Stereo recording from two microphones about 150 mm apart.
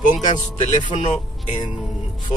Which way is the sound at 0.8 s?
35° left (ahead or behind).